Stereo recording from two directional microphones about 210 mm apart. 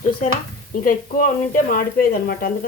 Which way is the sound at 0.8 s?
40° left (ahead or behind).